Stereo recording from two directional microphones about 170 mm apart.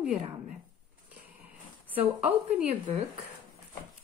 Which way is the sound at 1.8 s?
10° right (ahead or behind).